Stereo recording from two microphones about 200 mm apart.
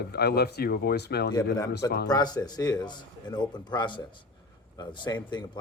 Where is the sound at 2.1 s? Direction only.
20° left (ahead or behind).